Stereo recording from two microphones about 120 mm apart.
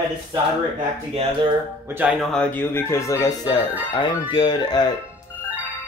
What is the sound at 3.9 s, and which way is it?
Speech, 40° left (ahead or behind).